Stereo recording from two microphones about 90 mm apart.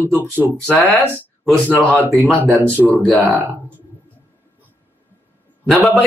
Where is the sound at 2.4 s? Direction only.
15° left (ahead or behind).